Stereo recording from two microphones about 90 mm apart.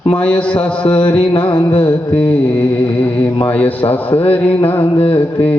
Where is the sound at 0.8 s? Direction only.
65° left (ahead or behind).